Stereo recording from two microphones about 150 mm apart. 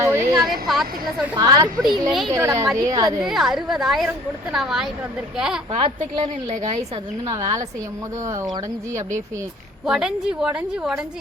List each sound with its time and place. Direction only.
0.0 s a sound: 20° right (ahead or behind)
0.7 s a woman's voice: centre (ahead or behind)
1.4 s a woman's voice: 25° right (ahead or behind)
2.0 s a woman's voice: centre (ahead or behind)
2.3 s a woman's voice: 20° right (ahead or behind)
3.2 s a woman's voice: centre (ahead or behind)
5.7 s a woman's voice: 40° right (ahead or behind)
7.3 s a woman's voice: 25° right (ahead or behind)
9.8 s a woman's voice: 5° right (ahead or behind)